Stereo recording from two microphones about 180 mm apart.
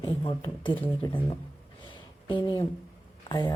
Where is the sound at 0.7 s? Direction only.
10° left (ahead or behind).